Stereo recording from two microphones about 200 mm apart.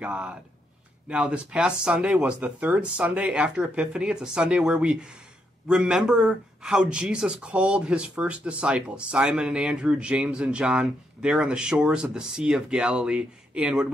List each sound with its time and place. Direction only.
0.0 s speech: 5° right (ahead or behind)